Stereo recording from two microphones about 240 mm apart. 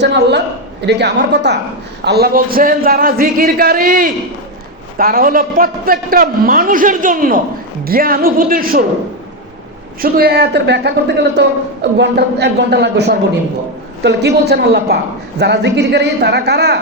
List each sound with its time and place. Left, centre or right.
0.0 s a man's voice: right
10.0 s speech: right